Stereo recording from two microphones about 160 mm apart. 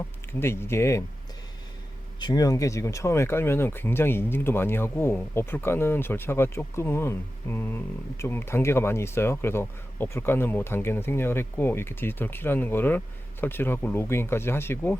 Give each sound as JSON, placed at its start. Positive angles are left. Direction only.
{"t": 0.3, "sound": "speech", "side_deg": 15}
{"t": 2.1, "sound": "speech", "side_deg": 25}